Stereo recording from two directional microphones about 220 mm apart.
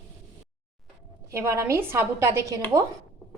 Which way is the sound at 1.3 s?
15° right (ahead or behind).